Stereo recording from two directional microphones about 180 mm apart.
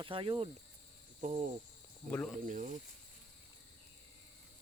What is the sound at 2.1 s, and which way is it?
Speech, 5° left (ahead or behind).